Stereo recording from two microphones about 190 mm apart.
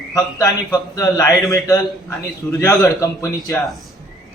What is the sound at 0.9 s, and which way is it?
A man's voice, 15° left (ahead or behind).